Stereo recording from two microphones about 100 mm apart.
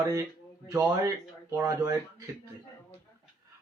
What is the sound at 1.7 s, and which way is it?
Speech, 35° right (ahead or behind).